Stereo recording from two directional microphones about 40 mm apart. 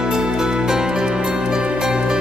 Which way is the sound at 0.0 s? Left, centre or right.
Centre.